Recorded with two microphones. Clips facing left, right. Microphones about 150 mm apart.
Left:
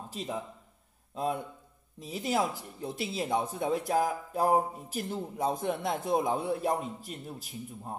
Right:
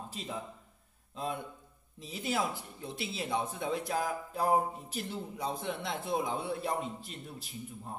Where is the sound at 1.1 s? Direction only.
45° left (ahead or behind).